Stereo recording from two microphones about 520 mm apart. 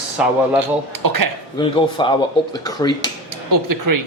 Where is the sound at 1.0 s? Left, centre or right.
Right.